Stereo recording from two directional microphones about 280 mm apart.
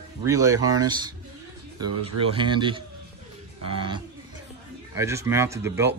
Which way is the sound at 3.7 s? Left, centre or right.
Centre.